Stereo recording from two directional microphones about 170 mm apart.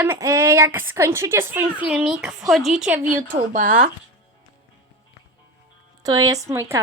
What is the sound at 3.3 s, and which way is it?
Speech, 50° right (ahead or behind).